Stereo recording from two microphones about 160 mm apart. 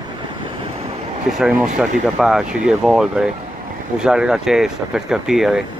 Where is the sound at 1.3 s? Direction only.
5° right (ahead or behind).